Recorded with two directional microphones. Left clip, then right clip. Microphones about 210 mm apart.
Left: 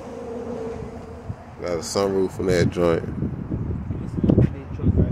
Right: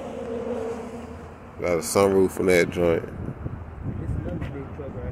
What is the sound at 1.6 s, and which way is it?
Speech, 5° right (ahead or behind).